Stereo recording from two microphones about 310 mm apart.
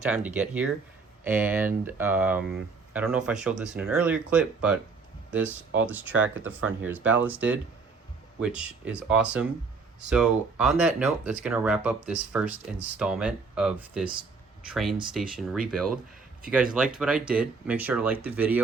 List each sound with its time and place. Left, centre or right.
0.3 s speech: centre
5.8 s speech: centre